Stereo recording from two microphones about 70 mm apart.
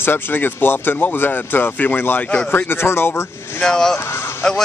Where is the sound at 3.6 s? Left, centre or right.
Centre.